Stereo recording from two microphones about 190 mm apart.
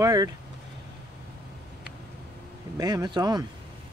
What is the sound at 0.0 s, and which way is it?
Speech, 20° right (ahead or behind).